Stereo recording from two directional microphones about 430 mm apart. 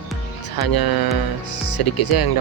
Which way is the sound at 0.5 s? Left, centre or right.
Left.